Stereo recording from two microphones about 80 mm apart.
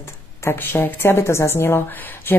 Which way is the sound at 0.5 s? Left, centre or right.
Left.